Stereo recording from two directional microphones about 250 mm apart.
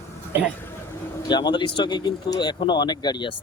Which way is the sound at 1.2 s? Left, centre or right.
Centre.